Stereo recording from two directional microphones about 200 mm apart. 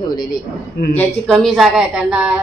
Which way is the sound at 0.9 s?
5° left (ahead or behind).